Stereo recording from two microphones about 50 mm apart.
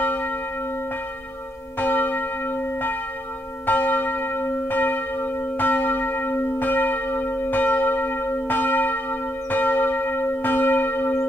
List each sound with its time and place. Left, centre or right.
0.0 s church bell: left
1.8 s church bell: left